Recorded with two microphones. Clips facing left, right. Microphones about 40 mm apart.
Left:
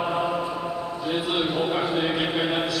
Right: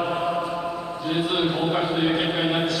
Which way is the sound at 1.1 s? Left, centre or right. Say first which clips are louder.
Right 2 dB; centre.